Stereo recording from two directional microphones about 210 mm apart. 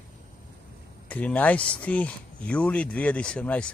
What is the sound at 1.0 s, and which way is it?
Speech, 5° left (ahead or behind).